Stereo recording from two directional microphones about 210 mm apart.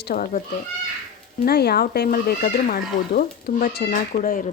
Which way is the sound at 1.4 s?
50° left (ahead or behind).